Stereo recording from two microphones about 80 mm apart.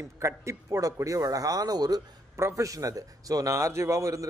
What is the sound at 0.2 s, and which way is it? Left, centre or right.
A man's voice, right.